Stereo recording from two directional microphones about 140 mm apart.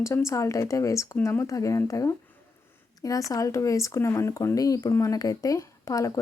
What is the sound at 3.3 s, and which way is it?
Speech, 25° left (ahead or behind).